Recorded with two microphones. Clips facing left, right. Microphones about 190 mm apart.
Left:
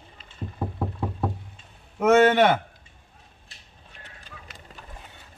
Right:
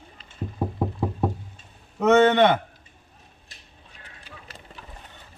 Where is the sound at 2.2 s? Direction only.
5° left (ahead or behind).